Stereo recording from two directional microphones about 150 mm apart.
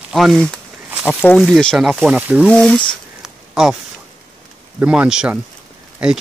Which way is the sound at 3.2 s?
5° right (ahead or behind).